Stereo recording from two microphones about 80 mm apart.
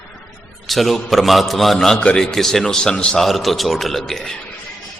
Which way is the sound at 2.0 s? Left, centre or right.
Centre.